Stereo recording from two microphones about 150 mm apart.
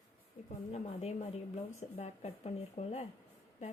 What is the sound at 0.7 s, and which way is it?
A woman's voice, 45° left (ahead or behind).